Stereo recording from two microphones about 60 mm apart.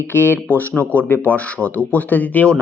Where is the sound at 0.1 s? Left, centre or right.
Left.